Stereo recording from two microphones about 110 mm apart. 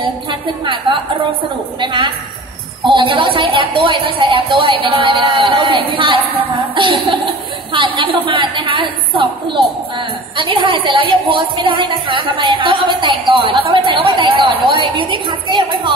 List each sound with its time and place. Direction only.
0.0 s a woman's voice: 50° right (ahead or behind)
1.8 s a woman's voice: 45° right (ahead or behind)